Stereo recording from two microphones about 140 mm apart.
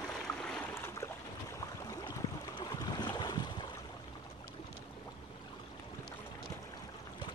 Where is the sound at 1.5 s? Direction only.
25° left (ahead or behind).